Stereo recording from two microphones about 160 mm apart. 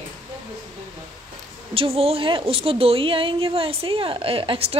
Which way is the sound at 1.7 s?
35° right (ahead or behind).